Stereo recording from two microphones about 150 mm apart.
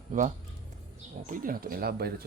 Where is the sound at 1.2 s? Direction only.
65° right (ahead or behind); by 2.3 s 90° right.